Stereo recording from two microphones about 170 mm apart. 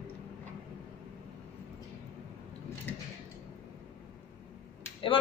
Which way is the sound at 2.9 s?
10° left (ahead or behind).